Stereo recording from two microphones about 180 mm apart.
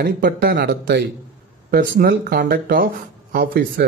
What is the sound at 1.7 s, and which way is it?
Speech, 50° right (ahead or behind).